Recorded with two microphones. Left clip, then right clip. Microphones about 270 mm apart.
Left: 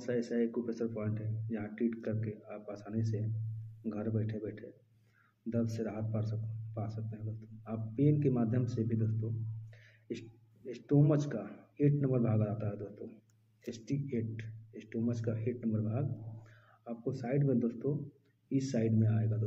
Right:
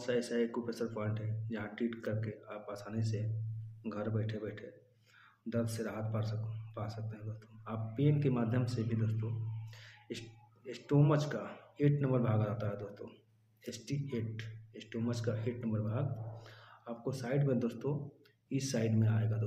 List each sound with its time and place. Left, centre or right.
0.0 s a man's voice: centre